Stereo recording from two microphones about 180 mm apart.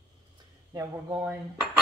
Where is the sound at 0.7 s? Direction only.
15° right (ahead or behind).